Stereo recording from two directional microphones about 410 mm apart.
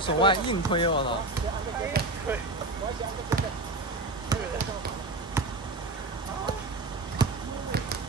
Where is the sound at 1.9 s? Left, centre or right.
Right.